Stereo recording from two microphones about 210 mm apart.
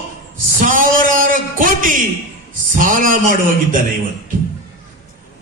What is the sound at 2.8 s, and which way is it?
A man's voice, 40° right (ahead or behind).